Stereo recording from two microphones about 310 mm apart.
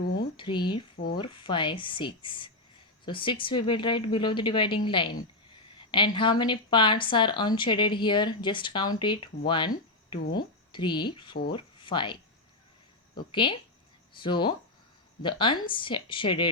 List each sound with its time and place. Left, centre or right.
0.0 s a sound: left
0.3 s a woman's voice: centre
5.9 s a woman's voice: centre
9.5 s cricket: centre
10.3 s speech: centre
13.1 s a woman's voice: centre